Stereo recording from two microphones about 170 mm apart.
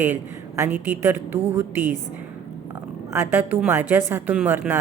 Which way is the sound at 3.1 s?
15° right (ahead or behind).